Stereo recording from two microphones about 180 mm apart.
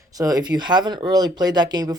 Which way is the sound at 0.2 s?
20° right (ahead or behind).